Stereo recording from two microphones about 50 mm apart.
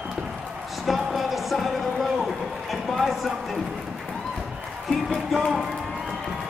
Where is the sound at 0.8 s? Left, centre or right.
Centre.